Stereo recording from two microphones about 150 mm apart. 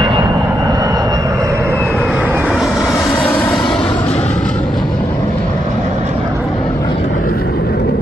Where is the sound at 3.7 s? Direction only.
30° left (ahead or behind).